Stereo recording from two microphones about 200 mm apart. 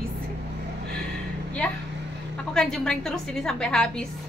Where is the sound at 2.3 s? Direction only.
5° left (ahead or behind).